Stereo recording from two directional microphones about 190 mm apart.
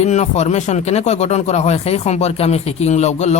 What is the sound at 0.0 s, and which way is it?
Speech, 35° left (ahead or behind).